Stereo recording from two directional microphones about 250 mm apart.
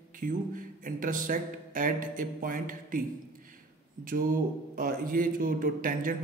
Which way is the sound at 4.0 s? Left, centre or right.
Right.